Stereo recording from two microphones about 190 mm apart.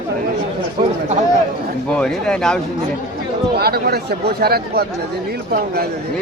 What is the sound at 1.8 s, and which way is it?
Speech, 5° left (ahead or behind).